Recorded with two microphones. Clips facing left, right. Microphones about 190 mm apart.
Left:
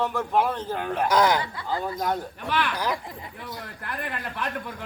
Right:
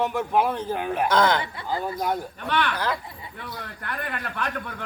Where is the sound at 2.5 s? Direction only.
10° left (ahead or behind).